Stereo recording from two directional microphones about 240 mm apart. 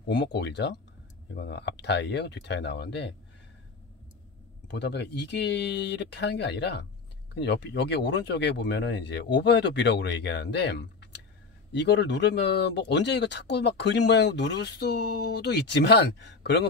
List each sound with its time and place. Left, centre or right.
0.1 s speech: left
4.6 s speech: left